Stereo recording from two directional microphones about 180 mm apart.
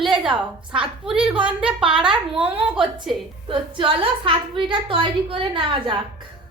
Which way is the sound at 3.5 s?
30° right (ahead or behind).